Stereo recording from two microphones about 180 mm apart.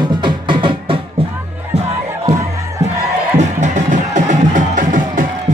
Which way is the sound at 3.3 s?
45° right (ahead or behind).